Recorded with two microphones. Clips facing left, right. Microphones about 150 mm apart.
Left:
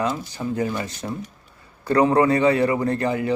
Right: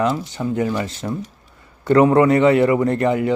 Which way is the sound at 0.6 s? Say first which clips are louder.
Right 4 dB; 45° right (ahead or behind).